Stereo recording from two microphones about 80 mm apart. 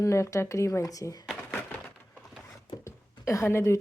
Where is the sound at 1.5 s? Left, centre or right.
Centre.